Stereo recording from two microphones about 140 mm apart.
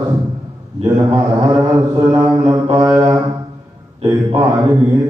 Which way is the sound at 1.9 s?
25° right (ahead or behind).